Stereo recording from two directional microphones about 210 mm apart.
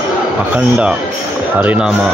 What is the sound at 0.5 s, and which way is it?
Speech, 5° right (ahead or behind).